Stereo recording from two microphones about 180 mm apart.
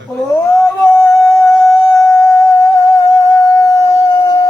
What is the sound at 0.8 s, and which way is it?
Singing, 15° left (ahead or behind).